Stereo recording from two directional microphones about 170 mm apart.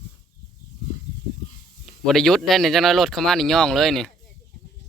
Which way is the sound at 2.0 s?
Centre (ahead or behind).